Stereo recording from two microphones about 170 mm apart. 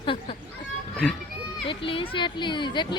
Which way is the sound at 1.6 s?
30° left (ahead or behind).